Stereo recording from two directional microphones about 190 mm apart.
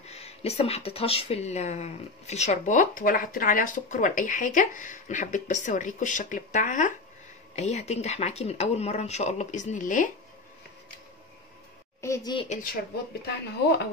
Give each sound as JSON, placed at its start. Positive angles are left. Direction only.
{"t": 0.0, "sound": "speech", "side_deg": 35}
{"t": 12.0, "sound": "a woman's voice", "side_deg": 15}
{"t": 13.5, "sound": "speech", "side_deg": 60}